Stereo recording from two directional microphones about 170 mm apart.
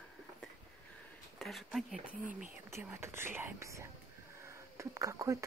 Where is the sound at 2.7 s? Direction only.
15° right (ahead or behind).